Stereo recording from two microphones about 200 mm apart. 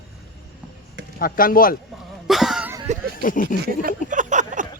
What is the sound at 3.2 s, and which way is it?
Speech, 40° left (ahead or behind).